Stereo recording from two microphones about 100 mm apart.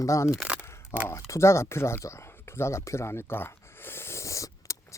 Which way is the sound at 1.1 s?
30° left (ahead or behind).